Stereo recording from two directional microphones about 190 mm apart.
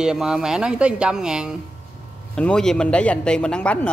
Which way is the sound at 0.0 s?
5° right (ahead or behind).